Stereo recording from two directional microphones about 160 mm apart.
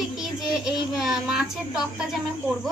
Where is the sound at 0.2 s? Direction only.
Centre (ahead or behind).